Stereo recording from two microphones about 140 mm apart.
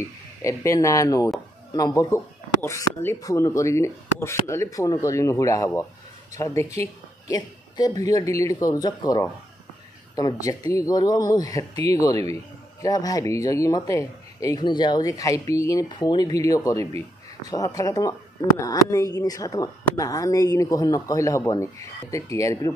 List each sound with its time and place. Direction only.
0.4 s a woman's voice: 20° left (ahead or behind)